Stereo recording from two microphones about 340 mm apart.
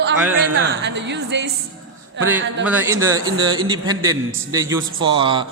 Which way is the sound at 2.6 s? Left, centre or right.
Centre.